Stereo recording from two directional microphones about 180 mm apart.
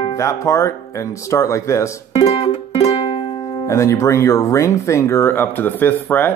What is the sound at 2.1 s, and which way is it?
Music, 30° left (ahead or behind).